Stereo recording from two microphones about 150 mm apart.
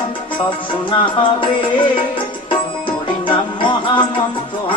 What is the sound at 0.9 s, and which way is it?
Music, 35° left (ahead or behind).